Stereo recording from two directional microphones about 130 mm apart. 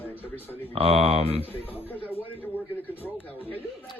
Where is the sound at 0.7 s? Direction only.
50° right (ahead or behind).